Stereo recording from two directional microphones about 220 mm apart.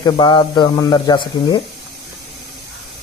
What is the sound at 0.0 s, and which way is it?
Speech, 20° left (ahead or behind).